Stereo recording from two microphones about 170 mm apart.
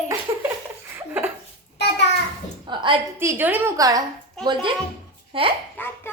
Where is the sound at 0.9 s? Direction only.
15° right (ahead or behind).